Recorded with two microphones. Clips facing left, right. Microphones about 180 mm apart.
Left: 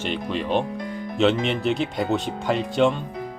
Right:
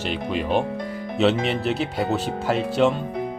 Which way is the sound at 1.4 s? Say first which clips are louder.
Even; 35° right (ahead or behind).